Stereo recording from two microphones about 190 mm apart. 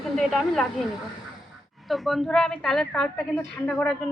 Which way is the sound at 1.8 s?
Centre (ahead or behind).